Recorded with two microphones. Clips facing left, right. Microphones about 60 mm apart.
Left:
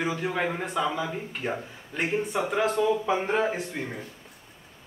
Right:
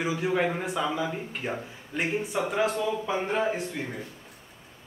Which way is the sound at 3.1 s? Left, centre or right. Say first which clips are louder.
Left 2 dB; centre.